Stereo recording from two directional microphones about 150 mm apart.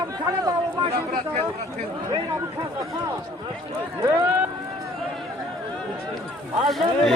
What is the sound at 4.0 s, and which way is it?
Speech, 15° right (ahead or behind).